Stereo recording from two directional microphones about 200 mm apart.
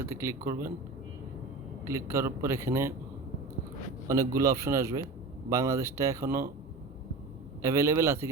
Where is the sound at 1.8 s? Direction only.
15° right (ahead or behind).